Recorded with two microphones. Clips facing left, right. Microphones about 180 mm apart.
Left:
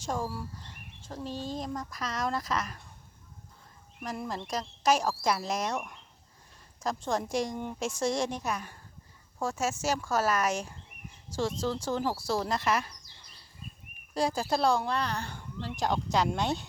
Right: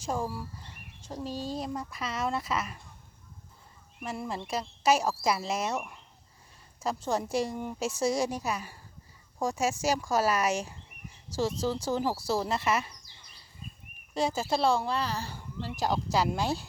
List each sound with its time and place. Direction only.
0.0 s speech: 5° right (ahead or behind)
1.2 s speech: 40° right (ahead or behind)
1.5 s a woman's voice: 10° right (ahead or behind)
4.0 s a woman's voice: 5° right (ahead or behind)
14.1 s speech: centre (ahead or behind)